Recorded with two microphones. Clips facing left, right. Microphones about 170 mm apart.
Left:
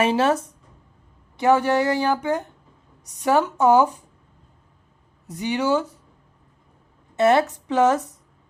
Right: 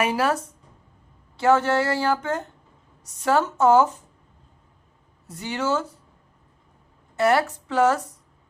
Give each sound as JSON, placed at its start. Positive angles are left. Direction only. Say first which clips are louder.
{"t": 0.0, "sound": "a woman's voice", "louder": "left 3 dB", "side_deg": 25}
{"t": 5.2, "sound": "speech", "louder": "left 4 dB", "side_deg": 15}
{"t": 7.2, "sound": "a woman's voice", "louder": "left 3 dB", "side_deg": 20}